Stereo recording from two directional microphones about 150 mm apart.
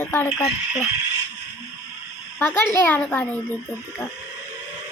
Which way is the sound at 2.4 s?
15° left (ahead or behind).